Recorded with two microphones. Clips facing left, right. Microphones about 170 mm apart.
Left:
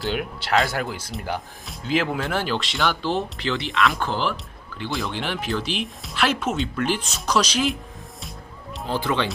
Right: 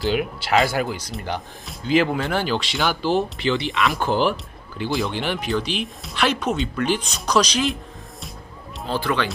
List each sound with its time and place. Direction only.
0.0 s speech: centre (ahead or behind)
4.0 s speech: 15° right (ahead or behind)
4.8 s speech: centre (ahead or behind)
8.9 s speech: 20° left (ahead or behind)